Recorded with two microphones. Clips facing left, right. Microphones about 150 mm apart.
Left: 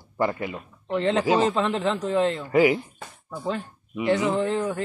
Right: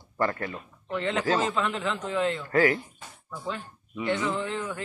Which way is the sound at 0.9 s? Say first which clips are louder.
Left 5 dB; 30° left (ahead or behind).